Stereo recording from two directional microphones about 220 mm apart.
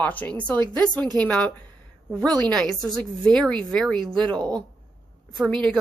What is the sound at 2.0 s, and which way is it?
Speech, 15° right (ahead or behind).